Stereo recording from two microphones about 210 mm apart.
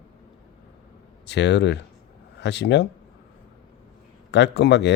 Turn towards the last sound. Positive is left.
turn(degrees=55)  # may be behind; listen again after turning